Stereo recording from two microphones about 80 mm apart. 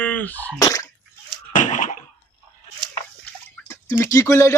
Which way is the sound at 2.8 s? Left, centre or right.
Right.